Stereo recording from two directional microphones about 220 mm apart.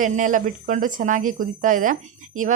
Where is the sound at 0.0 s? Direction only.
35° right (ahead or behind).